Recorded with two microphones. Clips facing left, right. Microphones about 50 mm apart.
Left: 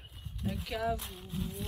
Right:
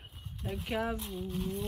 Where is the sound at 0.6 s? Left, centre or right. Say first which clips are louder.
Even; right.